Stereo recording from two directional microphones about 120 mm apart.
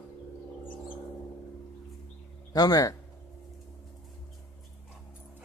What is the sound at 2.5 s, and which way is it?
Speech, 30° left (ahead or behind).